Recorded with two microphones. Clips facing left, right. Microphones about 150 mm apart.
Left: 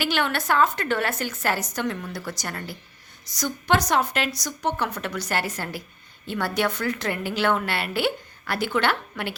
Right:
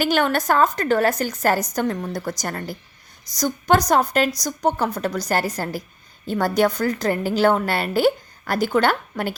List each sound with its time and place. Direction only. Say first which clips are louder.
0.0 s a woman's voice: right 6 dB; 45° right (ahead or behind)